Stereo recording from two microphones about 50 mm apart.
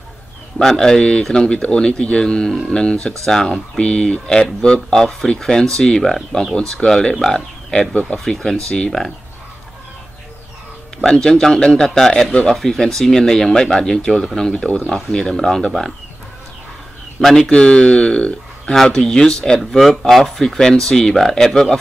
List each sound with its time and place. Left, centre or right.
0.6 s speech: centre
7.9 s speech: left
11.0 s speech: centre
17.2 s speech: centre